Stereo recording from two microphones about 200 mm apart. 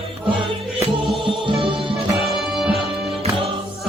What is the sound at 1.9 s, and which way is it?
Music, centre (ahead or behind).